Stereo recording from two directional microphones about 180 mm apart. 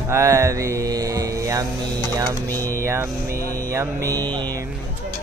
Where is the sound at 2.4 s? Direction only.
10° left (ahead or behind).